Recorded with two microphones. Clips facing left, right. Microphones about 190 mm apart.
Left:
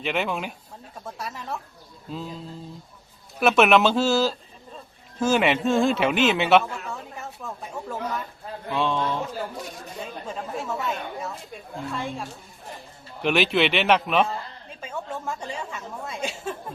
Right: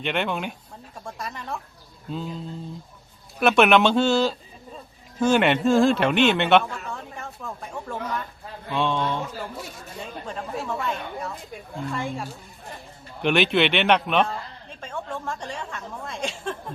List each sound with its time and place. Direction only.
0.0 s a man's voice: 5° left (ahead or behind)
3.4 s a man's voice: centre (ahead or behind)